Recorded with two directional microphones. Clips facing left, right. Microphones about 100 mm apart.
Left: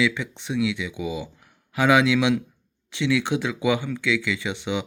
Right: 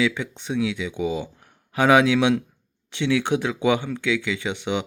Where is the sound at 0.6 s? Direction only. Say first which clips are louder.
Right 1 dB; 35° right (ahead or behind).